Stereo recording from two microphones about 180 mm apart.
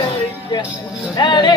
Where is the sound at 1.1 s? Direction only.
25° left (ahead or behind).